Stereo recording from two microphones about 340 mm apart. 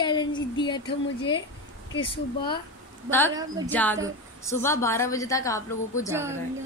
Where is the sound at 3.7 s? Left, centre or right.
Centre.